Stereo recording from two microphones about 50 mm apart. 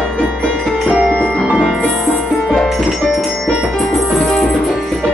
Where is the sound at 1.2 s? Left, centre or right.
Centre.